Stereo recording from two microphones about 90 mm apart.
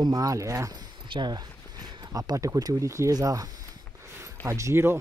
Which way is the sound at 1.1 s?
50° right (ahead or behind).